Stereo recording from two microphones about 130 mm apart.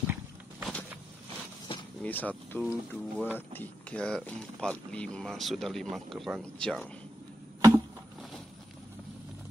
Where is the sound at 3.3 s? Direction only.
15° left (ahead or behind).